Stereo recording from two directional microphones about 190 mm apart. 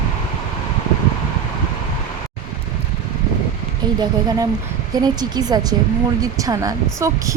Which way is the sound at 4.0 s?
20° right (ahead or behind).